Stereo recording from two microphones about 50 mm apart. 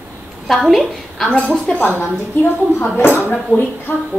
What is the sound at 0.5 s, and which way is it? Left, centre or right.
Speech, centre.